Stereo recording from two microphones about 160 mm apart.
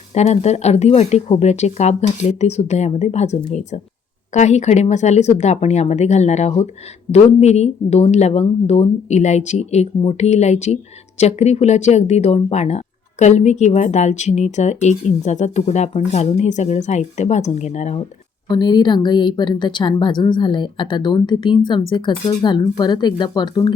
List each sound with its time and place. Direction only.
0.1 s speech: 45° left (ahead or behind)
18.4 s speech: 30° left (ahead or behind)